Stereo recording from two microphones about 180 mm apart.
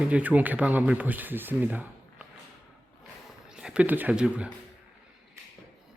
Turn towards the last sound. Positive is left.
turn(degrees=-5)  # may be behind; listen again after turning